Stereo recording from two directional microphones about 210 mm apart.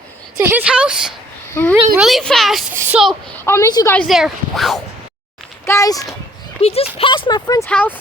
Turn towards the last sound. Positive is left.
turn(degrees=5)  # may be behind; listen again after turning